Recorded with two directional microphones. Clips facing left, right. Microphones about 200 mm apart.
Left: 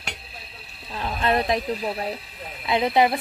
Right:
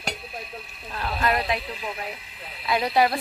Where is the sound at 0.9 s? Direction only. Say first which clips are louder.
Left 1 dB; 15° left (ahead or behind).